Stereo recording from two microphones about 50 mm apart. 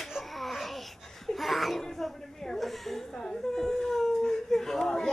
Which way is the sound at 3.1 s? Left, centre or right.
Centre.